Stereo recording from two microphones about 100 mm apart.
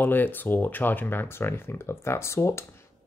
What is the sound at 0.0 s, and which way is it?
Speech, 20° left (ahead or behind).